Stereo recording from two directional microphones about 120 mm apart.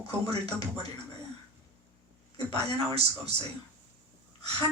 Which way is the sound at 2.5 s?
55° right (ahead or behind).